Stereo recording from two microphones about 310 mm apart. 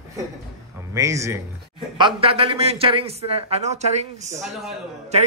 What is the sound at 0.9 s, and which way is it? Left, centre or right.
Speech, centre.